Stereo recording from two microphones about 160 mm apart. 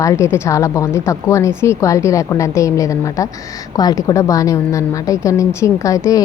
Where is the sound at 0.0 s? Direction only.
20° left (ahead or behind).